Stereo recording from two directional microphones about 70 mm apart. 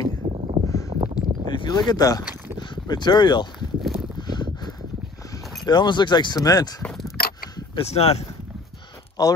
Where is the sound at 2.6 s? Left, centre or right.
Left.